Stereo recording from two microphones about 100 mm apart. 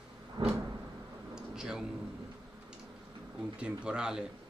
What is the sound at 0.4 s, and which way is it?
Cupboard open or close, 45° right (ahead or behind).